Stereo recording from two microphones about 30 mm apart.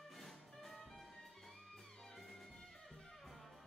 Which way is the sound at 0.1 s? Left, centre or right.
Centre.